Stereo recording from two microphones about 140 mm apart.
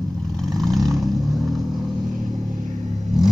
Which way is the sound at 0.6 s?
Centre (ahead or behind).